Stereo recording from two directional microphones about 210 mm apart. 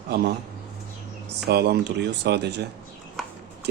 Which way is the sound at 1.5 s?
50° right (ahead or behind).